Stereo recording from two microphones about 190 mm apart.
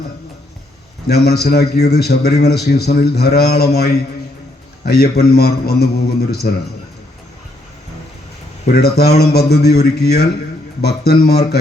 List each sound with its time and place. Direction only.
1.0 s a man's voice: 55° left (ahead or behind)
8.6 s a man's voice: 55° left (ahead or behind)